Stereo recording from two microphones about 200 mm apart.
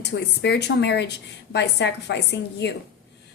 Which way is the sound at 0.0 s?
55° left (ahead or behind).